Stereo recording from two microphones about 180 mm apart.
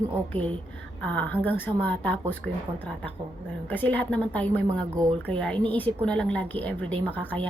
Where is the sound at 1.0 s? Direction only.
10° left (ahead or behind).